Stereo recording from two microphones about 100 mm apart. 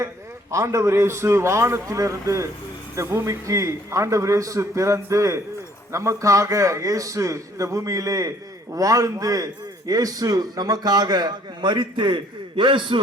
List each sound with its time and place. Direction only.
0.5 s a man's voice: 30° right (ahead or behind); by 13.0 s 55° right (ahead or behind)